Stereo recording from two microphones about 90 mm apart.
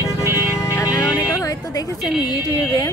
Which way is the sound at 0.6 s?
35° left (ahead or behind).